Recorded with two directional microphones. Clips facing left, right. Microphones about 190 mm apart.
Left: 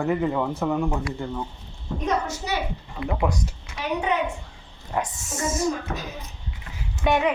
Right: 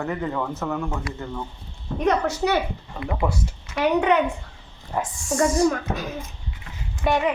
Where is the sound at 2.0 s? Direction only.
65° right (ahead or behind).